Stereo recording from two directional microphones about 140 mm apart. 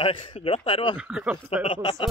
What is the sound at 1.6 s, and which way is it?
Speech, 40° left (ahead or behind).